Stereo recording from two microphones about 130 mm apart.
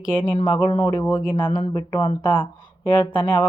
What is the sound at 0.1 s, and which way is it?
Speech, 40° left (ahead or behind).